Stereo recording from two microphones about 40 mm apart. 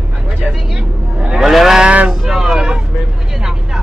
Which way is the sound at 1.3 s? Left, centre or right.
Centre.